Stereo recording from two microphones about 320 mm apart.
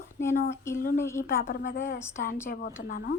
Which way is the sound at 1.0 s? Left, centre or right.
Centre.